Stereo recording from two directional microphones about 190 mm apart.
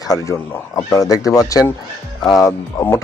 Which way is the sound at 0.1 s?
15° left (ahead or behind).